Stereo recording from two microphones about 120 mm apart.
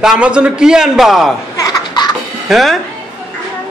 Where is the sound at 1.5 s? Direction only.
35° left (ahead or behind).